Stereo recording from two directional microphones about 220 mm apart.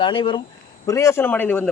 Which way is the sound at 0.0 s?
20° left (ahead or behind).